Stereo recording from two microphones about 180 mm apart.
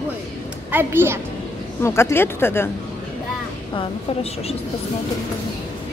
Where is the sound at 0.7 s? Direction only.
10° right (ahead or behind).